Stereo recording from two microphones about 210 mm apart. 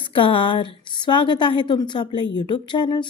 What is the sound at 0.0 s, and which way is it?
A woman's voice, 25° left (ahead or behind).